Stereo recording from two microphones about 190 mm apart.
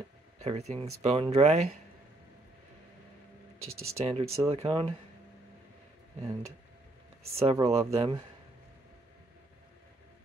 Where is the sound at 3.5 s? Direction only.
90° right.